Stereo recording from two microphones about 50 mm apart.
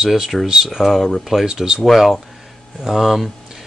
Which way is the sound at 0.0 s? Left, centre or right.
Centre.